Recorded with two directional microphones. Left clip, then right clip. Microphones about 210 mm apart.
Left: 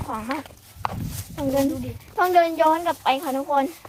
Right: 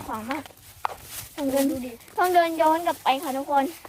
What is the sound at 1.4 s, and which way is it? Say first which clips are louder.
Speech: left 2 dB; 20° right (ahead or behind).